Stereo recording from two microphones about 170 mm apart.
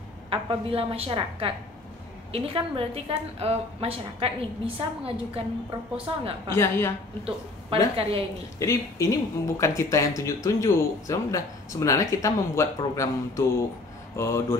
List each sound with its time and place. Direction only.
0.3 s a woman's voice: 35° right (ahead or behind)
6.5 s speech: 15° left (ahead or behind)
7.2 s a woman's voice: 35° right (ahead or behind)
8.5 s speech: 20° left (ahead or behind)